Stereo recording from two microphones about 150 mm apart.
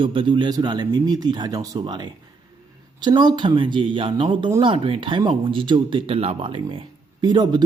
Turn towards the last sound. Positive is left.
turn(degrees=-30)  # may be behind; listen again after turning